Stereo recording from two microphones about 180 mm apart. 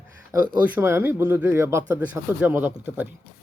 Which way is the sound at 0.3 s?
10° right (ahead or behind).